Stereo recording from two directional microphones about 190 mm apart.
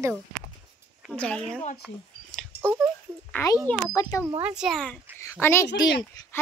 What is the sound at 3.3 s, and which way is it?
Speech, 15° left (ahead or behind).